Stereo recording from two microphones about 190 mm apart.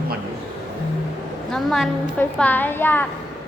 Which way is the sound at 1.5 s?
Centre (ahead or behind).